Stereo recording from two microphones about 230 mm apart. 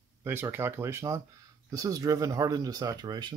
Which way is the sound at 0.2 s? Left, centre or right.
Centre.